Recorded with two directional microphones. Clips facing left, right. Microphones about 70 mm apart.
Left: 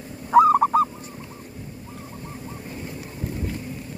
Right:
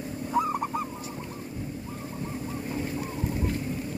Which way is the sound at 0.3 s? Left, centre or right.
Left.